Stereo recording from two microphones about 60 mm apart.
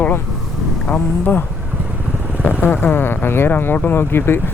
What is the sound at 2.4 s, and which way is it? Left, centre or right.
Speech, left.